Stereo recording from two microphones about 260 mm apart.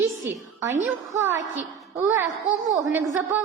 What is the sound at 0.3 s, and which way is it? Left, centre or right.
A woman's voice, centre.